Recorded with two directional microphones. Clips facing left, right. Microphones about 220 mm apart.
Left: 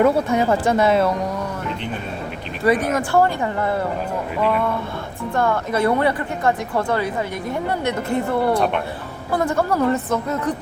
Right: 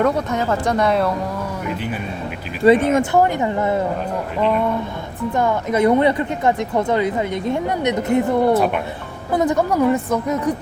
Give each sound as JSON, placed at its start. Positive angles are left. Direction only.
{"t": 0.0, "sound": "speech", "side_deg": 10}
{"t": 2.6, "sound": "speech", "side_deg": -25}
{"t": 5.3, "sound": "speech", "side_deg": -15}
{"t": 8.5, "sound": "speech", "side_deg": -5}
{"t": 9.3, "sound": "a woman's voice", "side_deg": -20}